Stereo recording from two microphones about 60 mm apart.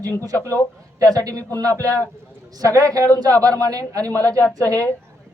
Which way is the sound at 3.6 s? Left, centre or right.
Right.